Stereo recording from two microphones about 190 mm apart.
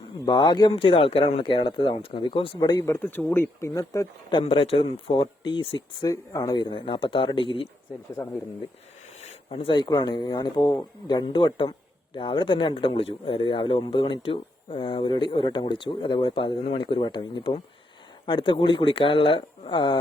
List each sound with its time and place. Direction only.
0.3 s speech: 20° left (ahead or behind)
8.1 s speech: 15° left (ahead or behind)
9.2 s speech: 30° left (ahead or behind)